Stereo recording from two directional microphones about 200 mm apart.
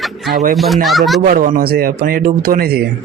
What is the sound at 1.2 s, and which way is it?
Speech, 45° right (ahead or behind).